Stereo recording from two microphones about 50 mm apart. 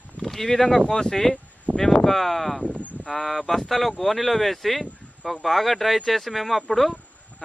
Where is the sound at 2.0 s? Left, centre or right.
Centre.